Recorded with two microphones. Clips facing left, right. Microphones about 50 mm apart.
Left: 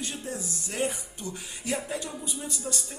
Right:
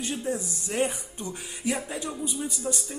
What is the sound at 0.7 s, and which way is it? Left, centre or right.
Speech, centre.